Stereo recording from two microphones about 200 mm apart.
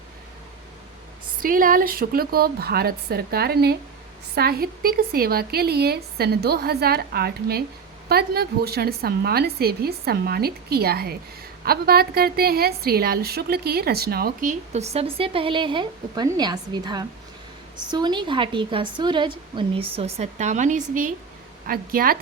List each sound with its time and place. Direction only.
1.4 s speech: 45° right (ahead or behind)
14.7 s a woman's voice: 30° right (ahead or behind)